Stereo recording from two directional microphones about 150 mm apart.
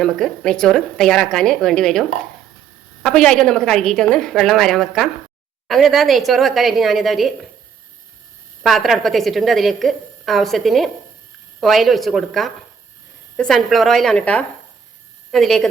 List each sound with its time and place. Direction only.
0.0 s a woman's voice: 5° left (ahead or behind)
8.6 s a woman's voice: centre (ahead or behind)